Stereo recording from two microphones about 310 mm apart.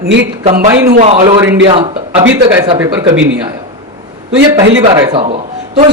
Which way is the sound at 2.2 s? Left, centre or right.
Right.